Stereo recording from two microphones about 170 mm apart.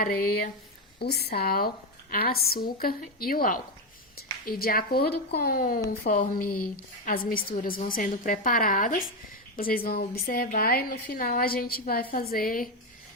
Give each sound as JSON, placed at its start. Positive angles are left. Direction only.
{"t": 0.0, "sound": "speech", "side_deg": 60}
{"t": 0.9, "sound": "speech", "side_deg": 70}